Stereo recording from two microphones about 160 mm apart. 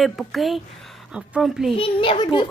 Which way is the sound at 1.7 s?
35° left (ahead or behind).